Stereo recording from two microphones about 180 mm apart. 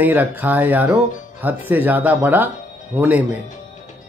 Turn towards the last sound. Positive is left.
turn(degrees=-10)  # may be behind; listen again after turning